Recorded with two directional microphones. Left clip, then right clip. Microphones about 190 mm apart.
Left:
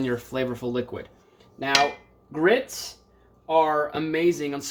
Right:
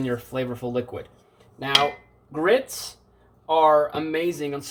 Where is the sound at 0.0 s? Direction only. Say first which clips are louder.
Even; 30° left (ahead or behind).